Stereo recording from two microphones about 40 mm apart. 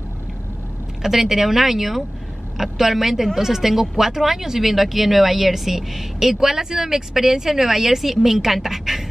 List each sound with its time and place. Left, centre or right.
1.0 s speech: centre